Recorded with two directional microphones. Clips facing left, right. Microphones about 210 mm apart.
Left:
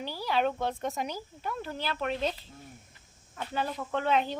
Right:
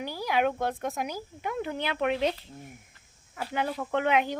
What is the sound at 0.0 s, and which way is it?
Speech, 15° right (ahead or behind).